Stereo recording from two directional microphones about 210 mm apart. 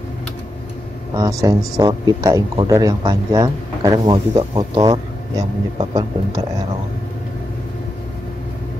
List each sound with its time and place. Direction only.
1.1 s speech: 15° right (ahead or behind)